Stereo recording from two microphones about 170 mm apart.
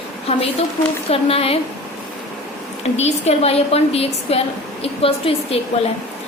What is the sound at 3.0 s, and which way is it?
A woman's voice, 40° left (ahead or behind).